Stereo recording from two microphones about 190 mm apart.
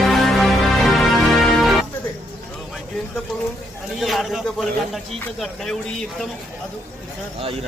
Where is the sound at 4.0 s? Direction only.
Centre (ahead or behind).